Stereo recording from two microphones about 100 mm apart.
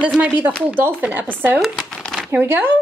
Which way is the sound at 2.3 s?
20° right (ahead or behind).